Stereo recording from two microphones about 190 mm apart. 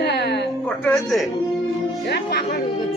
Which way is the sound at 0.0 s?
60° left (ahead or behind).